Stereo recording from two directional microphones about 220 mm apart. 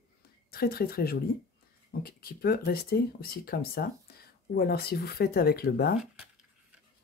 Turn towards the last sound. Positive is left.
turn(degrees=45)  # may be behind; listen again after turning